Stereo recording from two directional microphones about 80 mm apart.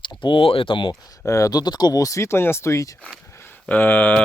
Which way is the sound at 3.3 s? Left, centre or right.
Left.